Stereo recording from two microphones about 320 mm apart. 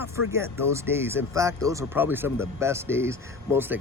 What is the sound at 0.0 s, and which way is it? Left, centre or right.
Speech, centre.